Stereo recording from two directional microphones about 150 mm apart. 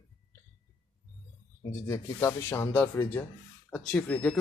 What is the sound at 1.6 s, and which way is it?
Speech, 15° left (ahead or behind).